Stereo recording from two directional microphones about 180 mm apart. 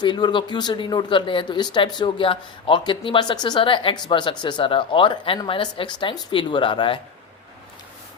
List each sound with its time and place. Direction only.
0.0 s speech: 25° left (ahead or behind)